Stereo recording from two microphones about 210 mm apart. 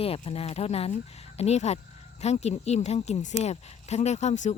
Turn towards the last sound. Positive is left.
turn(degrees=35)  # may be behind; listen again after turning